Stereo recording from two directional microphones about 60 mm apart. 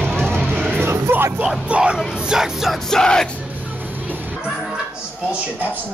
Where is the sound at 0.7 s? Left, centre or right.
Right.